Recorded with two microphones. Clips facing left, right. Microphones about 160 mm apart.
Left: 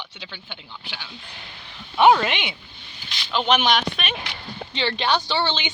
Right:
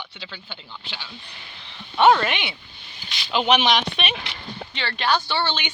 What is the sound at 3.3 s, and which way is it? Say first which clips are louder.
Speech: right 1 dB; 5° right (ahead or behind).